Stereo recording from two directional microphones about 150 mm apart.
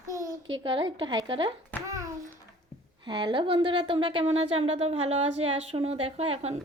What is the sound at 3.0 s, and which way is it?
Speech, 35° right (ahead or behind).